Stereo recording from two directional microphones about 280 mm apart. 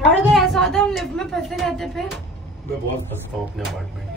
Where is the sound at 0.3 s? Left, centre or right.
Centre.